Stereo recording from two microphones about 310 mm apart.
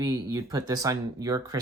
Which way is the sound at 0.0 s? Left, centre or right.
Centre.